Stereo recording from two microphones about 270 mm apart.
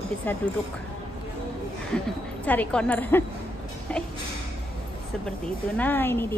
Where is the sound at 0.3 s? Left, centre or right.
Centre.